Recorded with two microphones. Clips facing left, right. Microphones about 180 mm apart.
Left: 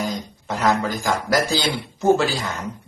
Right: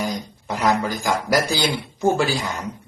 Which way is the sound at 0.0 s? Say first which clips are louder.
Even; 10° right (ahead or behind).